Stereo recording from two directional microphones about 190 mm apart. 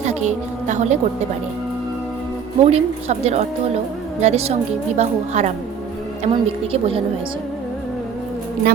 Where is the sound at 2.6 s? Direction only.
35° right (ahead or behind).